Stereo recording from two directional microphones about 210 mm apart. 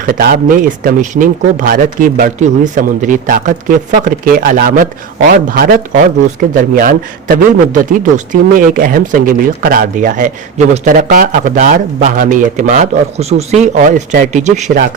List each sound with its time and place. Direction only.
0.0 s speech: 45° right (ahead or behind)